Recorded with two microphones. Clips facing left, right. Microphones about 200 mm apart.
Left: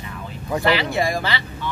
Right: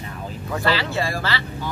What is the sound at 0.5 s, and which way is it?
Speech, 15° left (ahead or behind).